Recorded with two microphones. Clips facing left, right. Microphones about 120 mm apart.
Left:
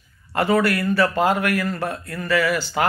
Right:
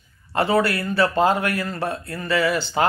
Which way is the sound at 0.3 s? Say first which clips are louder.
Left 1 dB; 30° right (ahead or behind).